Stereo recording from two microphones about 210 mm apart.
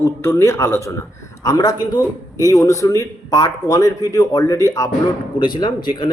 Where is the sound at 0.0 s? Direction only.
10° left (ahead or behind).